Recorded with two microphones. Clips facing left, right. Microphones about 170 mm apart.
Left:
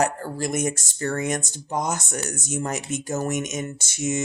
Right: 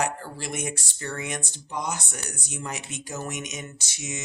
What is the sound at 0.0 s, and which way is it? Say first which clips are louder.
Speech: left 5 dB; 45° left (ahead or behind).